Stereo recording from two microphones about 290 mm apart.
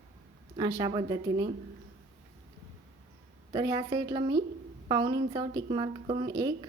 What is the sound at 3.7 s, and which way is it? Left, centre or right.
A woman's voice, centre.